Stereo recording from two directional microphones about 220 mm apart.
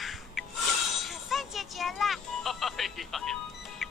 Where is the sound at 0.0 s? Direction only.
Centre (ahead or behind).